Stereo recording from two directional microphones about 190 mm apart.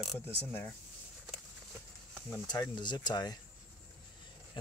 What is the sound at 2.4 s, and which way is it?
Speech, 20° left (ahead or behind).